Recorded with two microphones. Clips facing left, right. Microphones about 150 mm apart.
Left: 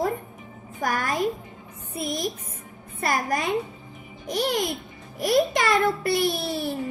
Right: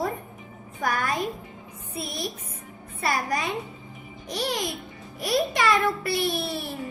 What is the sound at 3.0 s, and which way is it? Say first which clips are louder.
Music: left 1 dB; 50° left (ahead or behind).